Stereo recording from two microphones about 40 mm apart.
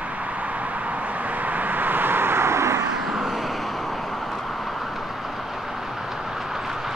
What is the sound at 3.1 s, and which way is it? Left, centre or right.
Vehicle, centre.